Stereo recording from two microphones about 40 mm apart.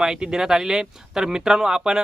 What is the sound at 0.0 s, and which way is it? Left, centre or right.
Speech, centre.